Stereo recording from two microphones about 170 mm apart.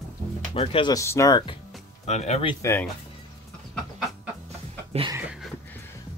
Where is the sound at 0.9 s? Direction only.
15° left (ahead or behind).